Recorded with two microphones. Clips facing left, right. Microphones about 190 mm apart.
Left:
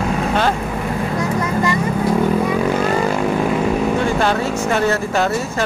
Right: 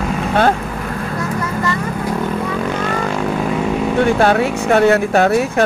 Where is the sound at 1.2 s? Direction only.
15° left (ahead or behind).